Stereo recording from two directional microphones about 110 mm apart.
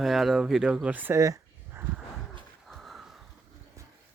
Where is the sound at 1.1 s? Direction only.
30° right (ahead or behind).